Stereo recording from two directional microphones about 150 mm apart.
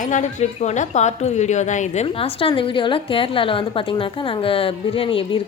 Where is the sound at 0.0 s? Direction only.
55° left (ahead or behind).